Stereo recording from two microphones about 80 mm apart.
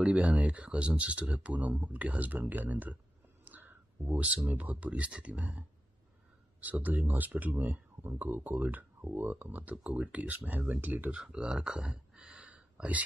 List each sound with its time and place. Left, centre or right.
0.0 s speech: centre
3.4 s a sound: right
4.5 s speech: centre